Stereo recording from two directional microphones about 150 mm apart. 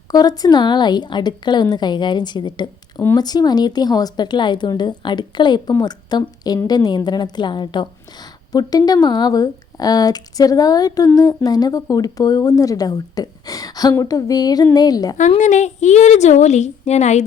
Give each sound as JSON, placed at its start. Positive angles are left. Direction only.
{"t": 0.1, "sound": "speech", "side_deg": 25}
{"t": 15.4, "sound": "a woman's voice", "side_deg": 55}